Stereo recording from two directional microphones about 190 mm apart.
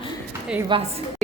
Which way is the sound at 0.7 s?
25° right (ahead or behind).